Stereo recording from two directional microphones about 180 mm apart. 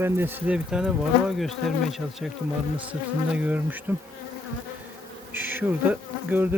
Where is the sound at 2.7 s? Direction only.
5° right (ahead or behind).